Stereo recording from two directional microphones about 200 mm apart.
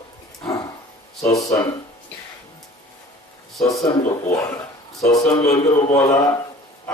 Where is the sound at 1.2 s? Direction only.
15° left (ahead or behind).